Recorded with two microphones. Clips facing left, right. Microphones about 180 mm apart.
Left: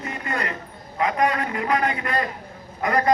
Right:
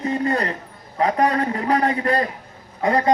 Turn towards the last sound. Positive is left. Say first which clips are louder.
# right 2 dB
turn(degrees=-25)  # may be behind; listen again after turning